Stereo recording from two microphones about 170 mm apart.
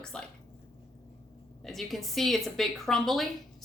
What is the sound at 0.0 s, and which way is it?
Speech, 5° left (ahead or behind).